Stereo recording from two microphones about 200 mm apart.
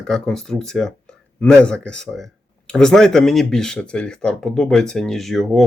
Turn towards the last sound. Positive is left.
turn(degrees=0)  # may be behind; listen again after turning